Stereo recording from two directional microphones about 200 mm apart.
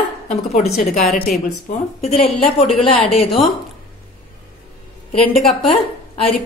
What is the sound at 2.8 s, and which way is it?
Speech, 25° left (ahead or behind).